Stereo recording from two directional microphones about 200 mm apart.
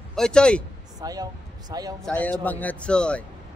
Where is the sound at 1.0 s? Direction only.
20° right (ahead or behind).